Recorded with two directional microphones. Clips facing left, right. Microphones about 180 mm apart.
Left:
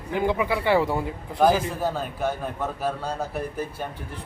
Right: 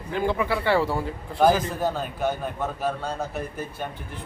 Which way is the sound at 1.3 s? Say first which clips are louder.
Even; centre (ahead or behind).